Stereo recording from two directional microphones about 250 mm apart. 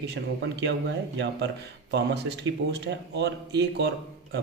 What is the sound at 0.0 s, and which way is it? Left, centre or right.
Speech, right.